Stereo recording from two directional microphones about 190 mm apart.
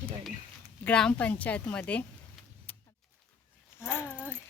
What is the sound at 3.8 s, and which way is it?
Speech, 10° left (ahead or behind).